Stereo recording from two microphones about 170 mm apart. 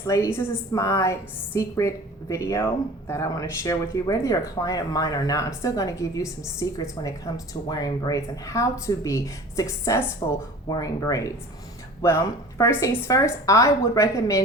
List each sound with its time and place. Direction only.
0.0 s a woman's voice: 20° left (ahead or behind)